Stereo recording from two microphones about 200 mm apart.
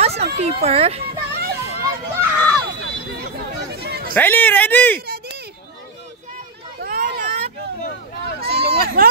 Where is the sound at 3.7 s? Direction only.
50° right (ahead or behind).